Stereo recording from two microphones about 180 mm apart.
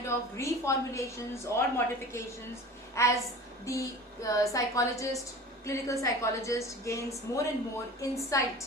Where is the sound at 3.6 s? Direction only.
20° left (ahead or behind).